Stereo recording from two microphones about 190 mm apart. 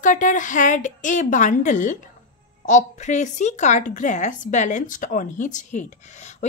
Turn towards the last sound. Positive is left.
turn(degrees=40)  # may be behind; listen again after turning